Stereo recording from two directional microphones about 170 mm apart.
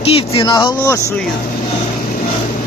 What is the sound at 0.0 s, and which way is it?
Speech, 35° left (ahead or behind).